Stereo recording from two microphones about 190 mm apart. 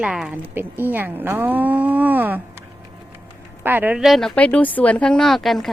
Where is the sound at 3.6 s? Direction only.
10° right (ahead or behind).